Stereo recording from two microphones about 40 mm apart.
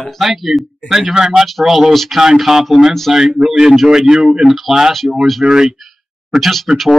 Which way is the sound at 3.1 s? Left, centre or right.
Centre.